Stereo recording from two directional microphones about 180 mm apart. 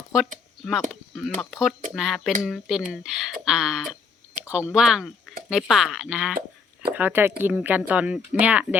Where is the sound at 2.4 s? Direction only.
Centre (ahead or behind).